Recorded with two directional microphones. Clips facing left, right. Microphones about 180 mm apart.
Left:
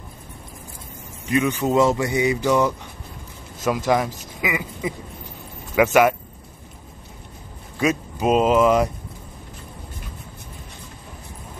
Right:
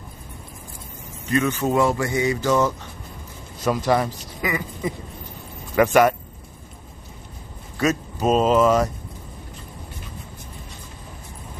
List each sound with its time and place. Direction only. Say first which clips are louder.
1.3 s a man's voice: left 1 dB; 15° left (ahead or behind)
4.4 s a sound: even; 10° left (ahead or behind)
5.8 s a man's voice: even; 5° left (ahead or behind)
7.8 s a man's voice: even; 10° left (ahead or behind)